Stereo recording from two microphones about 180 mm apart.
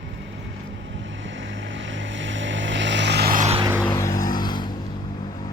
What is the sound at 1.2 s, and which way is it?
Vehicle, 90° right.